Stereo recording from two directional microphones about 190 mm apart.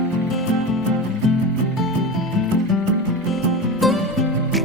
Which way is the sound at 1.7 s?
Centre (ahead or behind).